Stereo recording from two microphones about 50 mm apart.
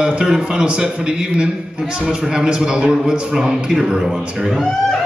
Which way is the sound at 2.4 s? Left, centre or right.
Centre.